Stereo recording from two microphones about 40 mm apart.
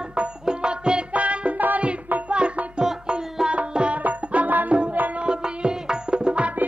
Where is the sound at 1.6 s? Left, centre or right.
Right.